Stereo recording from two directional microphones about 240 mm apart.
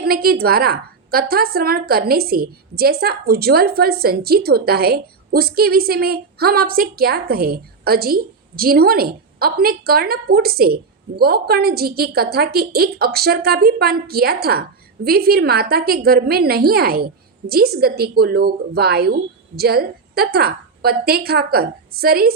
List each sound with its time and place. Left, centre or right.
0.0 s a woman's voice: right